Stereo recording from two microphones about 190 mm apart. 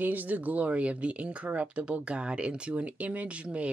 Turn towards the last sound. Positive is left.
turn(degrees=-5)  # may be behind; listen again after turning